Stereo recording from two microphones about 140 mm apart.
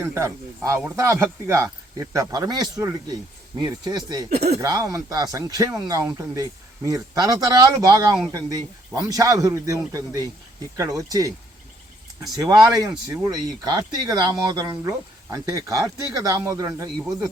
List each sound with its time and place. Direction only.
0.0 s speech: 20° right (ahead or behind)
12.4 s speech: 25° right (ahead or behind)